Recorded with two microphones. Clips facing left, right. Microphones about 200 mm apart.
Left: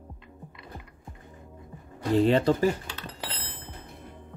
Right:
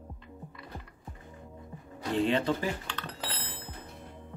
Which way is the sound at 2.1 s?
40° left (ahead or behind).